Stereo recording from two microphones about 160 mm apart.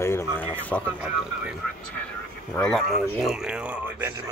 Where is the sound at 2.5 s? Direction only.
5° left (ahead or behind).